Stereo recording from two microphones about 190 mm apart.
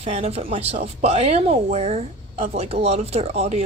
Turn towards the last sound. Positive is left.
turn(degrees=-35)  # may be behind; listen again after turning